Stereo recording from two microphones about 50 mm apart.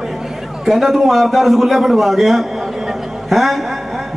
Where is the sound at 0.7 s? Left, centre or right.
Centre.